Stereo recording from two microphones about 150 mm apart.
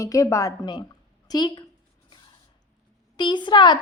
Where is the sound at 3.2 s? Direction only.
30° left (ahead or behind).